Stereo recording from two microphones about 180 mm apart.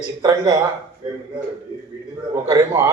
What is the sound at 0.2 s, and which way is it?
Speech, 25° right (ahead or behind).